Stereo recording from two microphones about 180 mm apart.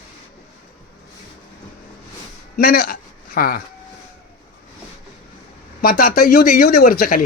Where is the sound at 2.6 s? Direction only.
55° left (ahead or behind).